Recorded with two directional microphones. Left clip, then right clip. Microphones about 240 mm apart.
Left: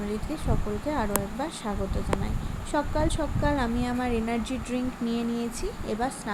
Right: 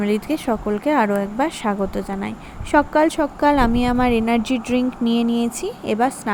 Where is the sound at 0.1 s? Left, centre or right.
Right.